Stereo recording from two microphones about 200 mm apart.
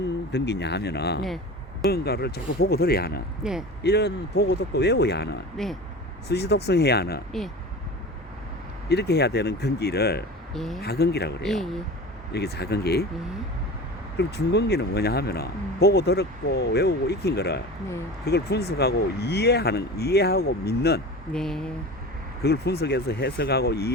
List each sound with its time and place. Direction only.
0.3 s speech: 55° left (ahead or behind)
5.6 s speech: centre (ahead or behind)
6.2 s speech: 55° left (ahead or behind)
8.9 s speech: 55° left (ahead or behind)
10.5 s speech: centre (ahead or behind)
10.8 s speech: 55° left (ahead or behind)
11.4 s speech: centre (ahead or behind)
12.3 s speech: 55° left (ahead or behind)
14.2 s speech: 55° left (ahead or behind)
21.3 s speech: 5° left (ahead or behind)
22.4 s speech: 55° left (ahead or behind)